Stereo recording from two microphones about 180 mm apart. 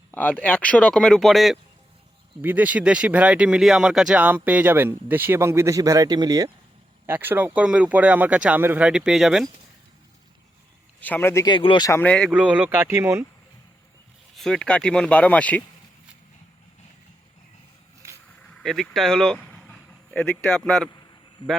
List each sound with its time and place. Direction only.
0.1 s speech: 10° left (ahead or behind)
11.0 s speech: 10° left (ahead or behind)
11.4 s speech: 25° left (ahead or behind)
11.9 s speech: 10° left (ahead or behind)
12.3 s speech: 5° right (ahead or behind)
14.3 s speech: 5° left (ahead or behind)
18.5 s speech: centre (ahead or behind)